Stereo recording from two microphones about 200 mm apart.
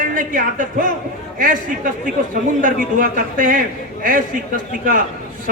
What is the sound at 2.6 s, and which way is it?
A man's voice, 45° right (ahead or behind).